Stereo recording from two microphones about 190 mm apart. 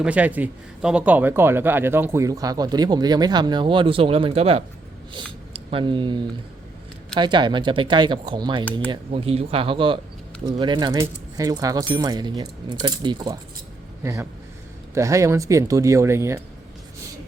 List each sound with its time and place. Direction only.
0.0 s speech: 5° right (ahead or behind)